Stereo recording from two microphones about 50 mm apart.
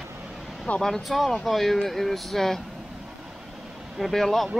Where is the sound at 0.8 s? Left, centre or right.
Centre.